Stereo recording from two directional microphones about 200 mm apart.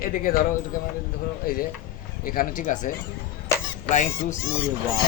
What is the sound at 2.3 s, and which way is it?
Speech, 40° left (ahead or behind).